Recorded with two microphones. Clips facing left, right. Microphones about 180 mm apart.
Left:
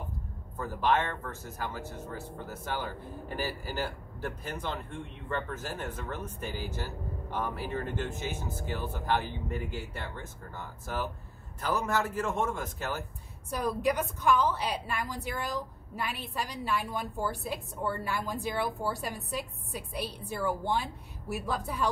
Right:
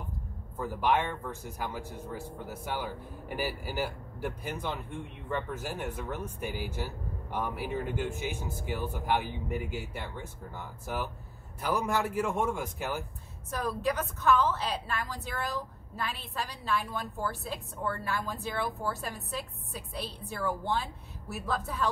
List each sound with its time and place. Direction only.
0.6 s speech: 10° right (ahead or behind)
13.5 s a woman's voice: 15° left (ahead or behind)